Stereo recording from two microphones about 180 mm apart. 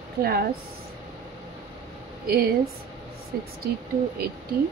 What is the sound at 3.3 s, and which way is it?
Speech, 55° right (ahead or behind).